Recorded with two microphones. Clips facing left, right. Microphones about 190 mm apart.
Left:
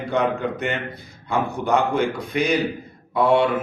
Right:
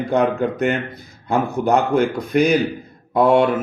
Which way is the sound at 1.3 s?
45° right (ahead or behind).